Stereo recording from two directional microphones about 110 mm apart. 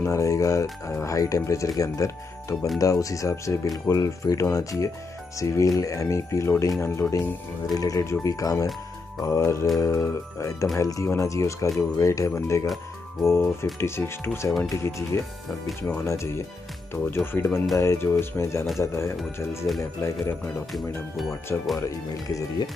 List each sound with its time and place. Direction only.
0.0 s speech: 30° left (ahead or behind)
21.7 s speech: 30° left (ahead or behind)